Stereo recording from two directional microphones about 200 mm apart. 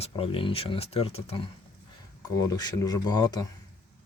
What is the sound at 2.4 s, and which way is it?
Speech, 20° left (ahead or behind).